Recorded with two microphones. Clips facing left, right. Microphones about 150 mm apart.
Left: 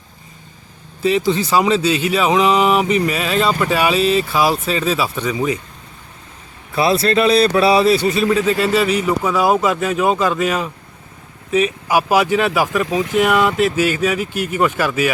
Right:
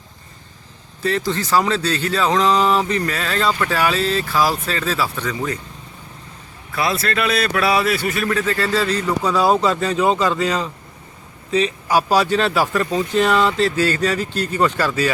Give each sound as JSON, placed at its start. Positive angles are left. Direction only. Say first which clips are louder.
{"t": 1.3, "sound": "speech", "louder": "left 2 dB", "side_deg": 15}
{"t": 6.7, "sound": "speech", "louder": "left 6 dB", "side_deg": 25}